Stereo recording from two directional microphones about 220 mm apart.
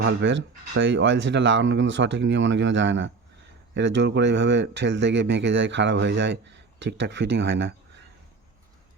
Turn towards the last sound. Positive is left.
turn(degrees=-50)  # may be behind; listen again after turning